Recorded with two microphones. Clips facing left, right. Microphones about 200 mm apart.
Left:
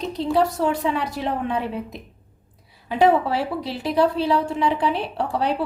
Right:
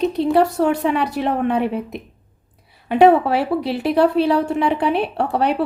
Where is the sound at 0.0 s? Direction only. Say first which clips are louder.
Right 5 dB; 60° right (ahead or behind).